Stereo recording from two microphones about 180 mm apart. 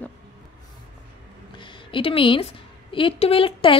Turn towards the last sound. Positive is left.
turn(degrees=30)  # may be behind; listen again after turning